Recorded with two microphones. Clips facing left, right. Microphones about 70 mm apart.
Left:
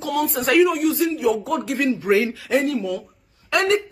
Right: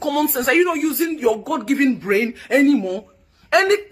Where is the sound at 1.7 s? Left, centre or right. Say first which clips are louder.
Even; right.